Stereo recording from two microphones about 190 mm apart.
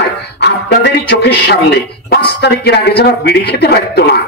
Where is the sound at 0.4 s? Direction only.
65° left (ahead or behind).